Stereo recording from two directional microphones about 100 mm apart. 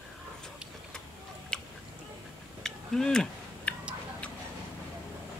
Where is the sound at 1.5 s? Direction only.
5° left (ahead or behind).